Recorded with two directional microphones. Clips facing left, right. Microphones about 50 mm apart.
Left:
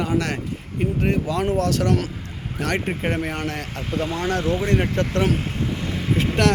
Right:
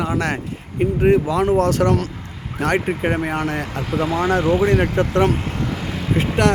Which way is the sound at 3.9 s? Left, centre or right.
Centre.